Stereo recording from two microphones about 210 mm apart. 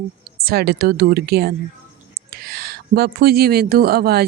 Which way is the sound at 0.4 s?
50° right (ahead or behind).